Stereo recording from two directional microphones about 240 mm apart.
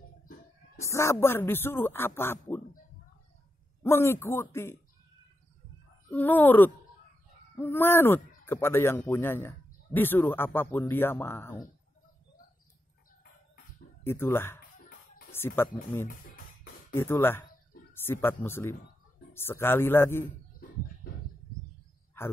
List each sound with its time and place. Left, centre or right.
0.7 s speech: centre
3.8 s speech: centre
6.0 s speech: centre
14.0 s speech: centre
16.1 s music: left
16.9 s speech: centre